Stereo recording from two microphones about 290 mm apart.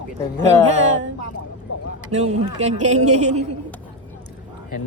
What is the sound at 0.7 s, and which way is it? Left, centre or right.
Speech, right.